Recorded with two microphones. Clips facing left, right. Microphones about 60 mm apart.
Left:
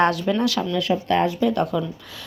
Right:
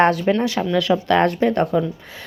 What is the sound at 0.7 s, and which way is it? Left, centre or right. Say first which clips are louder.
Speech: right 6 dB; right.